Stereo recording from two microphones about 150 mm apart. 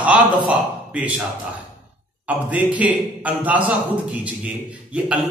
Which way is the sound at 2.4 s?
10° right (ahead or behind).